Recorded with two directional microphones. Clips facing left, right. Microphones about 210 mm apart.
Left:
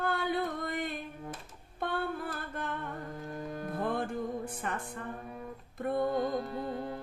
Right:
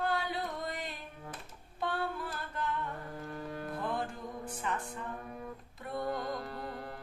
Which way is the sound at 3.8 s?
55° left (ahead or behind).